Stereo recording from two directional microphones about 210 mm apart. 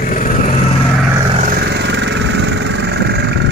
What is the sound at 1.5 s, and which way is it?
Vehicle, 50° right (ahead or behind).